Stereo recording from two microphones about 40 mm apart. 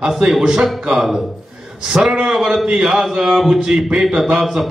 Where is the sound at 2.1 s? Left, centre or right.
Centre.